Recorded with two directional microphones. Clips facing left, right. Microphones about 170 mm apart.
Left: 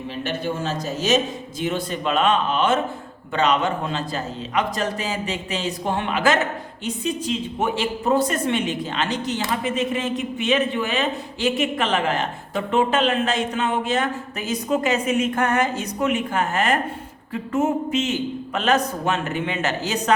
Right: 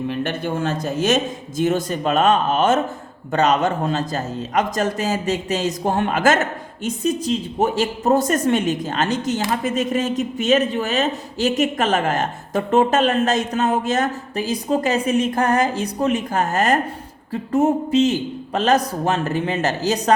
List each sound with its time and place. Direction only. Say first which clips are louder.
0.1 s a man's voice: right 3 dB; 55° right (ahead or behind); by 20.1 s 40° right (ahead or behind)